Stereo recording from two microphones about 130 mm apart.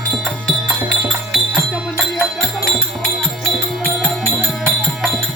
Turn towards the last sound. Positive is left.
turn(degrees=0)  # may be behind; listen again after turning